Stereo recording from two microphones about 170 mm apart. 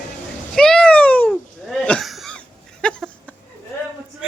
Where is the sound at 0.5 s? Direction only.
5° left (ahead or behind).